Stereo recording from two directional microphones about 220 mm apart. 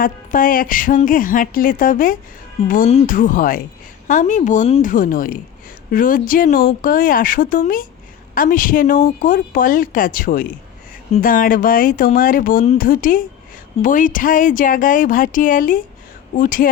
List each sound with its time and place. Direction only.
0.0 s speech: 40° left (ahead or behind)